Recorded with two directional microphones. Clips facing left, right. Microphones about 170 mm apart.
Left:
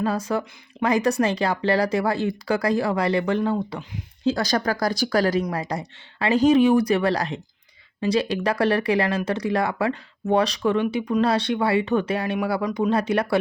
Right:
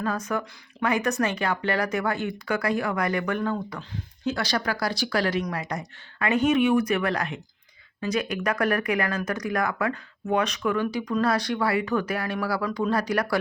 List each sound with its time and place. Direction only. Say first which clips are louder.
0.0 s speech: left 4 dB; 30° left (ahead or behind)
4.3 s speech: left 5 dB; 40° left (ahead or behind)